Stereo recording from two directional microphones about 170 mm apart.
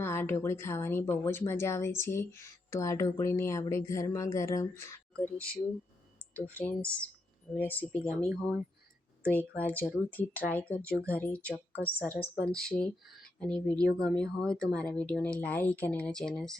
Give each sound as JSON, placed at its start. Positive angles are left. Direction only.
{"t": 0.0, "sound": "speech", "side_deg": 15}
{"t": 8.3, "sound": "speech", "side_deg": -10}
{"t": 9.2, "sound": "speech", "side_deg": 10}